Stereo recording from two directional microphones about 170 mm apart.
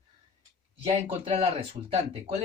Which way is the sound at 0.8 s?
35° right (ahead or behind).